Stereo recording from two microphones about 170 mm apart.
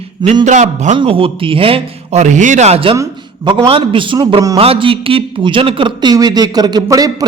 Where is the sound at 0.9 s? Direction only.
30° right (ahead or behind).